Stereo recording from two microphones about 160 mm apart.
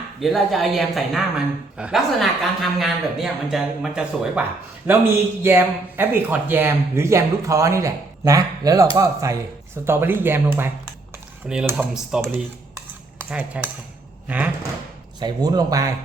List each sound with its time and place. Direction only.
0.2 s a man's voice: centre (ahead or behind)
12.2 s cutlery: 15° right (ahead or behind)
14.3 s speech: 10° right (ahead or behind)
15.2 s speech: 25° right (ahead or behind)